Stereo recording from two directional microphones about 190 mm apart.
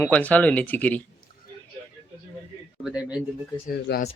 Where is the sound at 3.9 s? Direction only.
60° left (ahead or behind).